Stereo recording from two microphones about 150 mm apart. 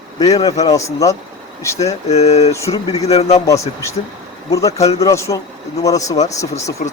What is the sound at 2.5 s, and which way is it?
Speech, 20° left (ahead or behind).